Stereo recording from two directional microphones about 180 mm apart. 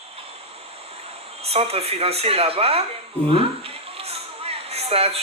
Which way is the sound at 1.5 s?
35° right (ahead or behind).